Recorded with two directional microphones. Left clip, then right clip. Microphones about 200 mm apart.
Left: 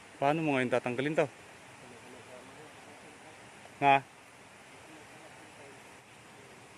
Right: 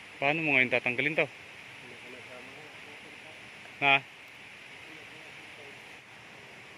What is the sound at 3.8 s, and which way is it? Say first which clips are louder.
Speech: even; 25° left (ahead or behind).